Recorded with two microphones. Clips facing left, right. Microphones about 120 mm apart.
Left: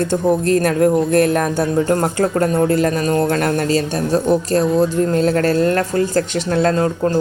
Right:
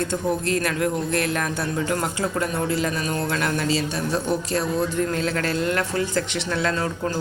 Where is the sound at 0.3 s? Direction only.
45° left (ahead or behind).